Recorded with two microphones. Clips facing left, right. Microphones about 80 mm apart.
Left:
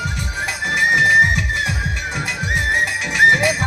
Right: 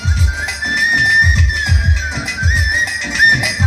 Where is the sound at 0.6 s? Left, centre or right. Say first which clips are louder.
Right 1 dB; centre.